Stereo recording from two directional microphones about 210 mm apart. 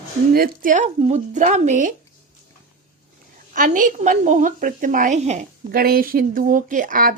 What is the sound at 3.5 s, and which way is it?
Speech, 40° right (ahead or behind).